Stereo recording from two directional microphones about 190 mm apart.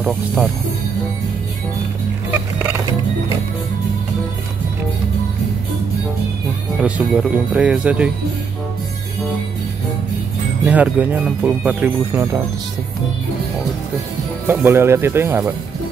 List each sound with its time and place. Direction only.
2.3 s music: 10° right (ahead or behind)
6.8 s speech: 5° right (ahead or behind)
10.6 s speech: 10° right (ahead or behind)
14.5 s speech: 10° right (ahead or behind)